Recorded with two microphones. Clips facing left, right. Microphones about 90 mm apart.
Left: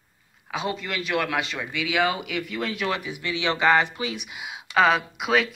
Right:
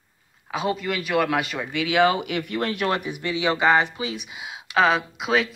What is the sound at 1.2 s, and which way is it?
Speech, 30° right (ahead or behind).